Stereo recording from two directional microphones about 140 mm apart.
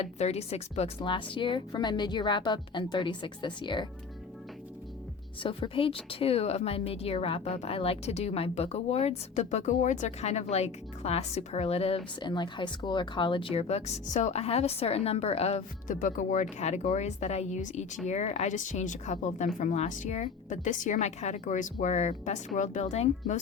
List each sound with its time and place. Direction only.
0.0 s speech: 50° left (ahead or behind); by 3.8 s 35° left (ahead or behind)
5.4 s speech: 40° left (ahead or behind)
12.3 s speech: 35° left (ahead or behind); by 16.0 s 50° left (ahead or behind)
16.0 s speech: 65° left (ahead or behind)